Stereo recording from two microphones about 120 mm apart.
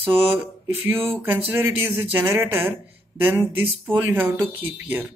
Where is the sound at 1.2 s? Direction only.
15° right (ahead or behind).